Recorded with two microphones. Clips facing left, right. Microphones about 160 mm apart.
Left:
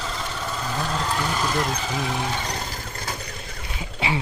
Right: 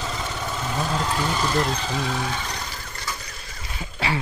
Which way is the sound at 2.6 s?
50° left (ahead or behind).